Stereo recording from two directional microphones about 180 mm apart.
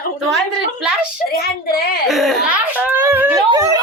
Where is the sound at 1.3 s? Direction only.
60° left (ahead or behind).